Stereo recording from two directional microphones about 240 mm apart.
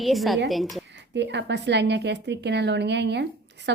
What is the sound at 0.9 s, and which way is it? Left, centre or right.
Speech, right.